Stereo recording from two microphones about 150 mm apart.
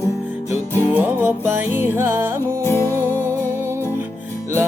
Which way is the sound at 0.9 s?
15° right (ahead or behind).